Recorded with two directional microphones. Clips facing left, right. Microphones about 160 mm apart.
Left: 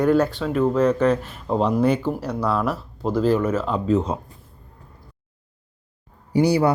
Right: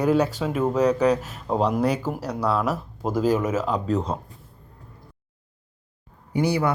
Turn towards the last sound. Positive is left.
turn(degrees=30)  # may be behind; listen again after turning